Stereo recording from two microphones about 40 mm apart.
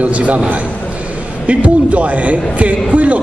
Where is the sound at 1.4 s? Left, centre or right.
Right.